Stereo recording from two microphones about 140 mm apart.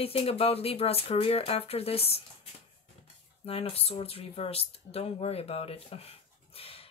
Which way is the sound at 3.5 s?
45° left (ahead or behind).